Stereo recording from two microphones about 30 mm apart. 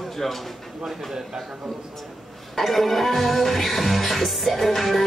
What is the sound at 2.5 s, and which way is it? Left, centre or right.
Music, centre.